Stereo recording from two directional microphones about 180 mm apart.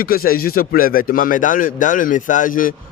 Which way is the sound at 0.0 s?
55° left (ahead or behind).